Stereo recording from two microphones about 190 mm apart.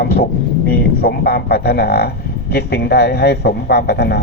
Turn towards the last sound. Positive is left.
turn(degrees=60)  # may be behind; listen again after turning